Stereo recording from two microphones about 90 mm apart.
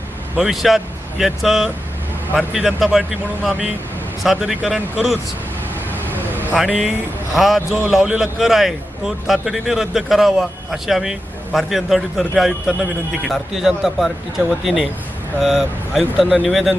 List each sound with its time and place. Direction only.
0.3 s a man's voice: 5° right (ahead or behind)
6.1 s vehicle: 20° right (ahead or behind)
6.6 s a man's voice: 5° right (ahead or behind)